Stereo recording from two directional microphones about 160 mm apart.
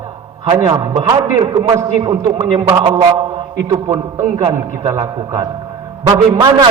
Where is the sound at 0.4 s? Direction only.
35° right (ahead or behind).